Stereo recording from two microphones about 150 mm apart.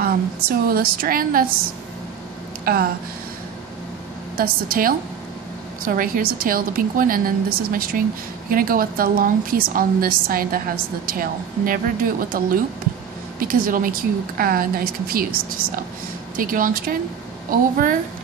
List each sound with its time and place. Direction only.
0.0 s a woman's voice: 85° right
2.6 s speech: 85° right
4.4 s a woman's voice: 70° right (ahead or behind)
16.3 s a woman's voice: 65° right (ahead or behind)